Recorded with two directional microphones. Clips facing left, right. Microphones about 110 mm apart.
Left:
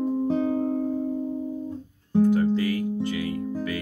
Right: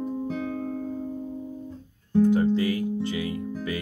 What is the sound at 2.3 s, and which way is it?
Music, 25° right (ahead or behind).